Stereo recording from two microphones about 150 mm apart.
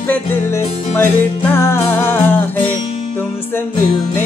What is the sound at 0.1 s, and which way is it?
Speech, 15° left (ahead or behind).